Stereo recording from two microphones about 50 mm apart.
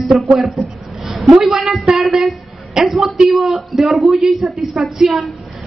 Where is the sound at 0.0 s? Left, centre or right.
Centre.